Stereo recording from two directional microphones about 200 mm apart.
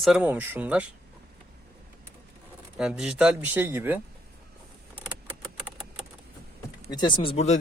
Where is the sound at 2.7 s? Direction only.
5° right (ahead or behind).